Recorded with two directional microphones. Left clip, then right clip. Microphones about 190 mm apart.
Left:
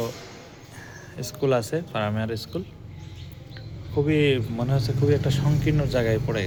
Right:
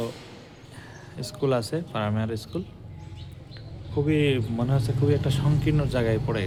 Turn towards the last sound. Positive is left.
turn(degrees=-20)  # may be behind; listen again after turning